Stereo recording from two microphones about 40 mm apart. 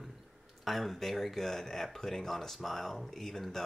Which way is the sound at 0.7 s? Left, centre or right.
Centre.